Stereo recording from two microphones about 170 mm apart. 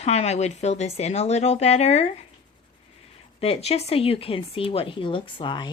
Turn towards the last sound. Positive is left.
turn(degrees=25)  # may be behind; listen again after turning